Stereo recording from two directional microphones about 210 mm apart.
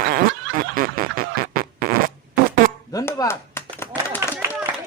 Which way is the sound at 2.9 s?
15° left (ahead or behind).